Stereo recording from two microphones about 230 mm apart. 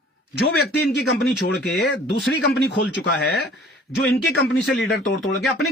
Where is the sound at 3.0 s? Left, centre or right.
Left.